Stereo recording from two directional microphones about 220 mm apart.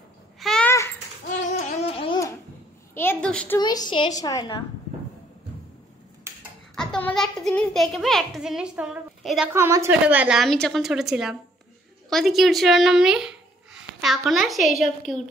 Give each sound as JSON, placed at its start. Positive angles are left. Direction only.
{"t": 0.4, "sound": "babbling", "side_deg": 5}
{"t": 1.8, "sound": "babbling", "side_deg": 25}
{"t": 2.9, "sound": "a sound", "side_deg": 10}
{"t": 3.5, "sound": "a woman's voice", "side_deg": 20}
{"t": 6.3, "sound": "a sound", "side_deg": -10}
{"t": 6.7, "sound": "a child's voice", "side_deg": 5}
{"t": 9.5, "sound": "a child's voice", "side_deg": -15}